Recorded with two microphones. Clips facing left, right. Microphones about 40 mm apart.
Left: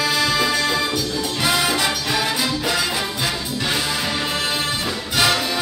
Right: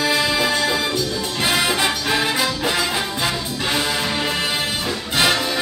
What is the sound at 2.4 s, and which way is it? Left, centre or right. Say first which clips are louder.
Music: right 1 dB; right.